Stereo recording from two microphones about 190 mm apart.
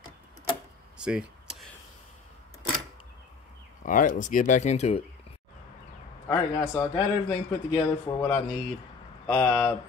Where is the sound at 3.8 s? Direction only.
45° left (ahead or behind).